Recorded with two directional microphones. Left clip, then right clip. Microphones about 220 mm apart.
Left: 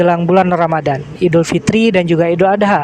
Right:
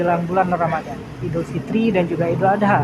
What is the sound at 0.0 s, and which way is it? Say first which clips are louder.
Speech: left 7 dB; 45° left (ahead or behind).